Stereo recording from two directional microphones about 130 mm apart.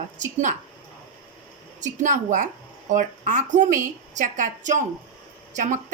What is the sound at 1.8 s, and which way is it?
A woman's voice, 75° right (ahead or behind).